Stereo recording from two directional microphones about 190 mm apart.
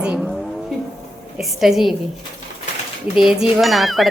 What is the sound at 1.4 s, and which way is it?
Speech, centre (ahead or behind).